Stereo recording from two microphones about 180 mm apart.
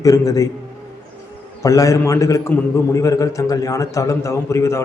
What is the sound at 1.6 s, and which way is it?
A man's voice, 20° left (ahead or behind).